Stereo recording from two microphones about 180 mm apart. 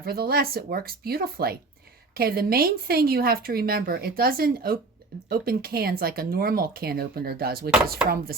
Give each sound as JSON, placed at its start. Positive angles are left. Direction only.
{"t": 0.0, "sound": "speech", "side_deg": -60}